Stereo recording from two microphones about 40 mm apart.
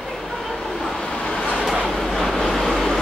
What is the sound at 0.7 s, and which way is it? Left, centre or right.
Vehicle, centre.